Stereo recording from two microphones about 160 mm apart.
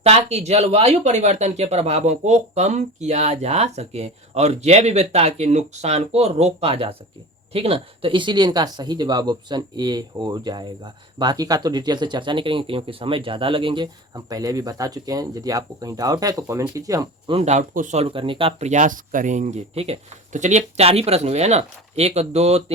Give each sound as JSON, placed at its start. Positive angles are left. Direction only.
{"t": 0.0, "sound": "speech", "side_deg": -40}
{"t": 17.3, "sound": "speech", "side_deg": -45}